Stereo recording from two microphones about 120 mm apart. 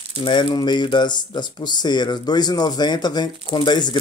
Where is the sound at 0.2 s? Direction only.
40° left (ahead or behind).